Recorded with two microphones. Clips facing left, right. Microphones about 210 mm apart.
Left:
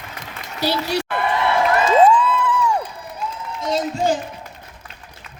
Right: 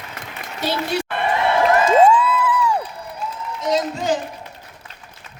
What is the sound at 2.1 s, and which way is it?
Crowd, 5° right (ahead or behind).